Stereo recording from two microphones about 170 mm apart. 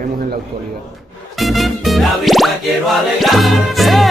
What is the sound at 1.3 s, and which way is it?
Music, centre (ahead or behind).